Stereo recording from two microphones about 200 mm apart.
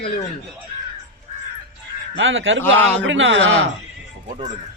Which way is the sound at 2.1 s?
75° right (ahead or behind).